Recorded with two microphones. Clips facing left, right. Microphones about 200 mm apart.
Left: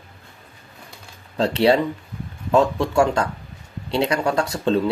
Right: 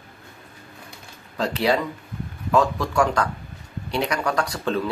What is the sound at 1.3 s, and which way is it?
Speech, 30° left (ahead or behind).